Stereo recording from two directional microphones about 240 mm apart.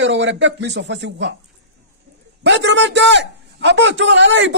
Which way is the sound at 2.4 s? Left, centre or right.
Right.